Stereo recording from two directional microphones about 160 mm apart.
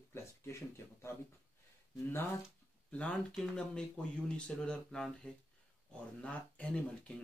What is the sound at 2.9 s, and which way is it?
Speech, 5° left (ahead or behind).